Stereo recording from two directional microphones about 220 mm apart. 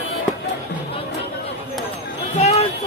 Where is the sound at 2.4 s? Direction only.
30° left (ahead or behind).